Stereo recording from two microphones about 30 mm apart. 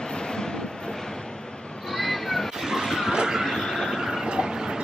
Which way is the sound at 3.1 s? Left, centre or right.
Right.